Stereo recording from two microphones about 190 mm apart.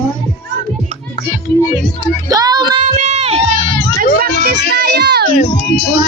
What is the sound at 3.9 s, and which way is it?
Music, 50° right (ahead or behind).